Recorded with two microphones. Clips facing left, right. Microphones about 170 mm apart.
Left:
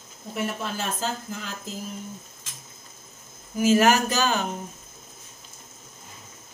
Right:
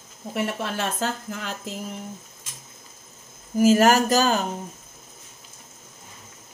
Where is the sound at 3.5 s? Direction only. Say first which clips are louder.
Right 3 dB; 40° right (ahead or behind).